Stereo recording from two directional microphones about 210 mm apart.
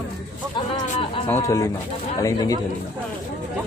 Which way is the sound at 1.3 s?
15° left (ahead or behind).